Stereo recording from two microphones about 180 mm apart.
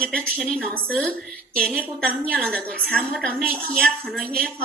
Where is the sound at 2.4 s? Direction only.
5° left (ahead or behind).